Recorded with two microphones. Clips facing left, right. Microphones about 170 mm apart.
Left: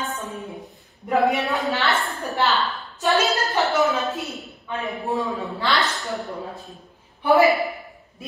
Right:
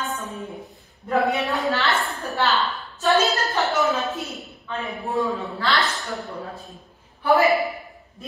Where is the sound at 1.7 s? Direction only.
20° left (ahead or behind).